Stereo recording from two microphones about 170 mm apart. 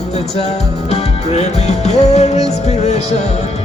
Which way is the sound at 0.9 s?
40° left (ahead or behind).